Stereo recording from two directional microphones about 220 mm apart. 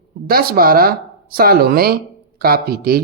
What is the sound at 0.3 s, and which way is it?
Speech, 45° right (ahead or behind).